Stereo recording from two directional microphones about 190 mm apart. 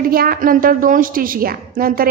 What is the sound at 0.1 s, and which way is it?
A woman's voice, 50° right (ahead or behind).